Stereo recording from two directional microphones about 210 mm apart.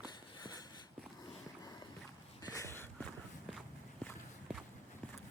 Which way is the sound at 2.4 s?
15° left (ahead or behind).